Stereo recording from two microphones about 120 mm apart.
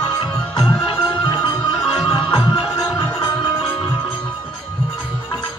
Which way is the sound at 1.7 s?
5° right (ahead or behind).